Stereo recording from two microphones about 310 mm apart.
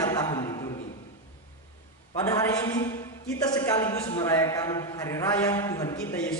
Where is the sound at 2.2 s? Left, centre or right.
Centre.